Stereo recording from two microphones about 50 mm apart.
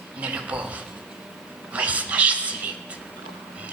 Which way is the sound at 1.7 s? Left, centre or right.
Right.